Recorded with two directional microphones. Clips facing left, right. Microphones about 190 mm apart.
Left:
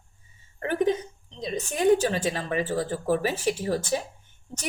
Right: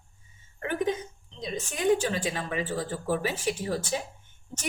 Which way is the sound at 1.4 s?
40° left (ahead or behind).